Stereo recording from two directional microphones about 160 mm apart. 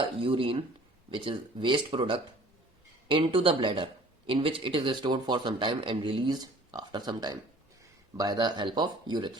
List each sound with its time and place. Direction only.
0.0 s a man's voice: 35° right (ahead or behind)